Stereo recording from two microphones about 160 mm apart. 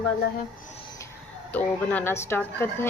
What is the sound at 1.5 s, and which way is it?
Speech, 10° left (ahead or behind).